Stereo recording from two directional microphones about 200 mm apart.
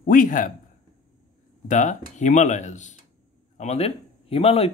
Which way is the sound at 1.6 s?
40° left (ahead or behind).